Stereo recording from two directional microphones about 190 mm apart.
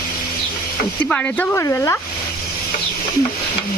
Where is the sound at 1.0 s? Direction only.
10° left (ahead or behind).